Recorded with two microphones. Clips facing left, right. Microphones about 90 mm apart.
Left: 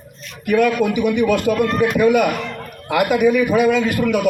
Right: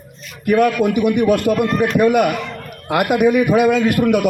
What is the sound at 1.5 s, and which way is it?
Speech, centre (ahead or behind).